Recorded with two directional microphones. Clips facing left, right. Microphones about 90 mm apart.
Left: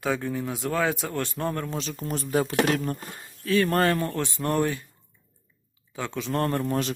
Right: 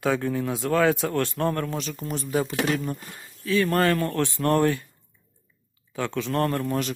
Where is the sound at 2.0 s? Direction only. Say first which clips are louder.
Left 1 dB; 35° left (ahead or behind).